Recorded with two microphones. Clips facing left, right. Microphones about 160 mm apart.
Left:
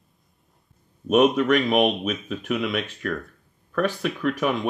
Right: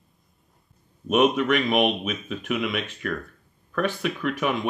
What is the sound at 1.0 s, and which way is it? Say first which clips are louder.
Speech: left 2 dB; 40° left (ahead or behind).